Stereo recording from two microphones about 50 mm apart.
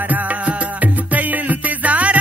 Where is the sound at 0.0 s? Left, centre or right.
Right.